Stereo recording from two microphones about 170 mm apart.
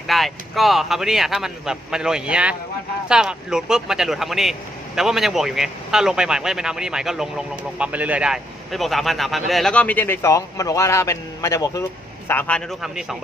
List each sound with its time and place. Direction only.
0.1 s speech: centre (ahead or behind)